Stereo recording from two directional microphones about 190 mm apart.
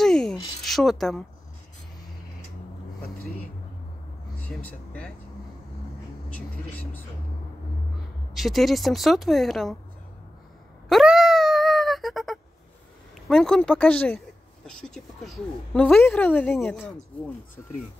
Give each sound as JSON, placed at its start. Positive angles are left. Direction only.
{"t": 0.0, "sound": "a sound", "side_deg": 5}
{"t": 4.4, "sound": "speech", "side_deg": 5}
{"t": 6.3, "sound": "vehicle", "side_deg": 10}
{"t": 8.4, "sound": "a woman's voice", "side_deg": 0}
{"t": 10.9, "sound": "wail", "side_deg": 0}
{"t": 13.3, "sound": "a woman's voice", "side_deg": 5}